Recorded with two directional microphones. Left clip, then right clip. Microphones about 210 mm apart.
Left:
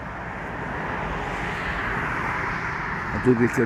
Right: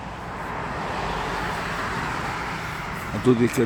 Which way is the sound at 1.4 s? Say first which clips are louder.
Even; 50° right (ahead or behind).